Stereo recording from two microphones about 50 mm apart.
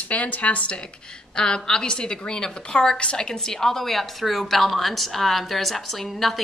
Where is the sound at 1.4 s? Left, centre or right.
Centre.